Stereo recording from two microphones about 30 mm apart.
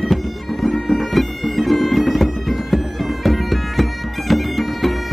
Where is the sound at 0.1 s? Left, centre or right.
Centre.